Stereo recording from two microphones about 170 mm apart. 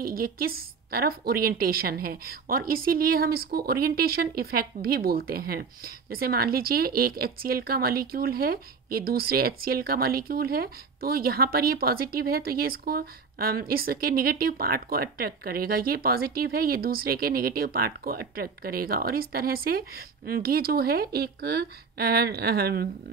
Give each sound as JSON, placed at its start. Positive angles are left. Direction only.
{"t": 0.0, "sound": "a woman's voice", "side_deg": -60}